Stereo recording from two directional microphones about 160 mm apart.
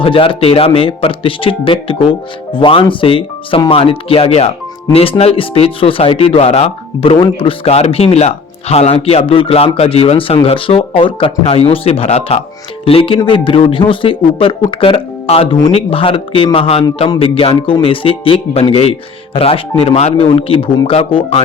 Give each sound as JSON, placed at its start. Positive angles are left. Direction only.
{"t": 0.0, "sound": "speech", "side_deg": 35}